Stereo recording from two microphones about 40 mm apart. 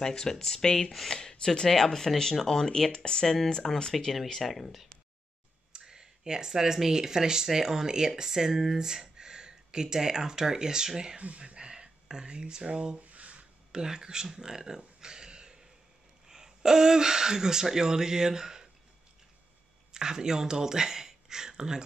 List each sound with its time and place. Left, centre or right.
0.0 s speech: centre
3.9 s speech: centre
5.7 s speech: centre
11.1 s speech: right
13.0 s a sound: right
13.7 s speech: centre
19.9 s speech: centre